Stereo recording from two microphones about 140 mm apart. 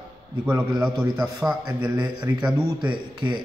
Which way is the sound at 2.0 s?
30° right (ahead or behind).